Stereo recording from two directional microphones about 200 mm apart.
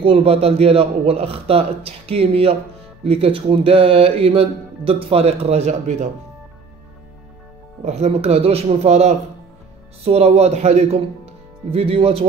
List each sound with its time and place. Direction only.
0.0 s speech: 30° right (ahead or behind)
7.8 s a man's voice: 35° right (ahead or behind)